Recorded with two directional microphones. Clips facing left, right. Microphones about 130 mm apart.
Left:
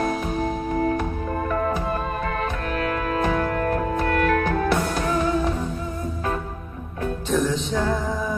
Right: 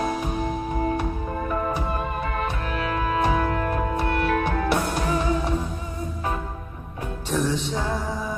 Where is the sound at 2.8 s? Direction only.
15° right (ahead or behind).